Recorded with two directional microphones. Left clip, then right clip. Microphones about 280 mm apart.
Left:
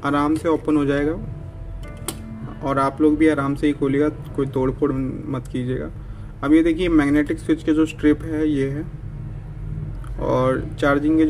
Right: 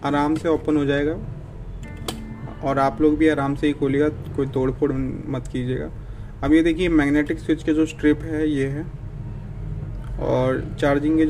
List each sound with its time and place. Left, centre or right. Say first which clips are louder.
0.0 s speech: left 1 dB; centre
2.6 s speech: even; centre
10.2 s speech: left 1 dB; centre